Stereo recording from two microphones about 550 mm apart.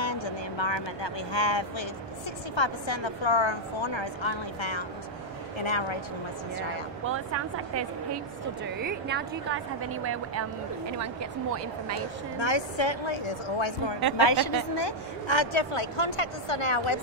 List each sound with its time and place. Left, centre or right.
0.0 s vehicle: left
2.5 s a woman's voice: left
7.1 s a woman's voice: right
12.4 s a woman's voice: left
14.1 s a woman's voice: left